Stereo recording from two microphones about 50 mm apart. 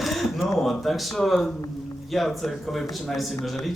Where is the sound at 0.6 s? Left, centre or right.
Centre.